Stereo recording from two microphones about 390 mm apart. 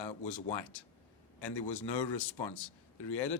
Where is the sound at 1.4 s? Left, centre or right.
Left.